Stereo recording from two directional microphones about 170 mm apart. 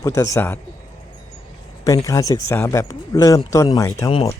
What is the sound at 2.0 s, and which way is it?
Speech, 20° left (ahead or behind).